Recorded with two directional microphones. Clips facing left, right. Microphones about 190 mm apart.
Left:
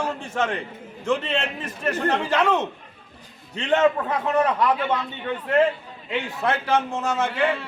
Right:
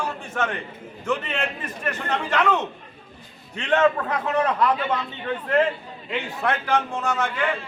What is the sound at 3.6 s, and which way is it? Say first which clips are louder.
Speech: even; 20° left (ahead or behind).